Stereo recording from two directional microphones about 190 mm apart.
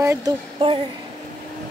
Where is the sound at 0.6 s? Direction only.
25° right (ahead or behind).